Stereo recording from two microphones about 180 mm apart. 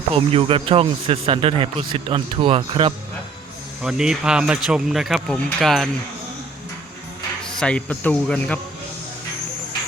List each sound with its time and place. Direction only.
0.2 s speech: 30° right (ahead or behind)
3.8 s speech: 5° right (ahead or behind)
7.4 s speech: 5° left (ahead or behind)